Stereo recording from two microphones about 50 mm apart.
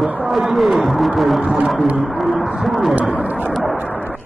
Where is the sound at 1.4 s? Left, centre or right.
Centre.